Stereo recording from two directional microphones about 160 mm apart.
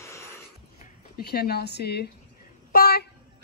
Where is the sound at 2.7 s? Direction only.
70° left (ahead or behind).